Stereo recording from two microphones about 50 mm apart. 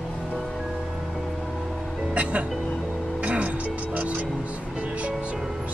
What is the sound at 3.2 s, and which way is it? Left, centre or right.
Music, right.